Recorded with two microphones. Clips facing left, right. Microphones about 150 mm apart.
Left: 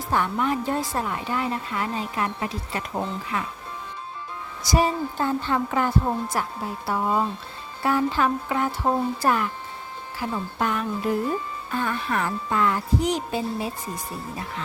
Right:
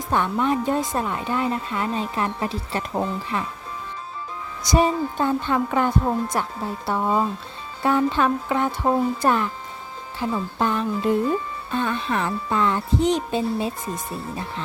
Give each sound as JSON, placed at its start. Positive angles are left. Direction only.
{"t": 0.1, "sound": "speech", "side_deg": -20}
{"t": 4.6, "sound": "speech", "side_deg": -20}
{"t": 7.8, "sound": "speech", "side_deg": -20}